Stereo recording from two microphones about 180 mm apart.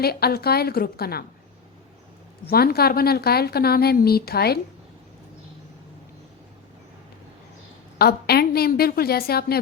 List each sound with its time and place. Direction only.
0.0 s a woman's voice: 60° left (ahead or behind)
2.5 s a woman's voice: 60° left (ahead or behind)
7.9 s a woman's voice: 60° left (ahead or behind)